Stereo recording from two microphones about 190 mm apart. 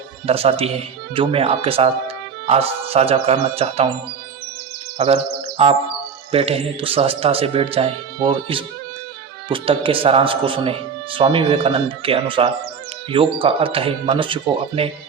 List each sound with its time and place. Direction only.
0.3 s speech: 30° right (ahead or behind)
4.9 s a man's voice: 30° right (ahead or behind)